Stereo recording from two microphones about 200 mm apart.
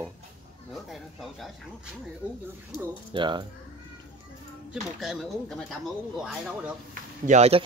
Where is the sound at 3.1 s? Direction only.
20° right (ahead or behind).